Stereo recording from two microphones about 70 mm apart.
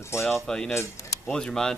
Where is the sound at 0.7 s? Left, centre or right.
Left.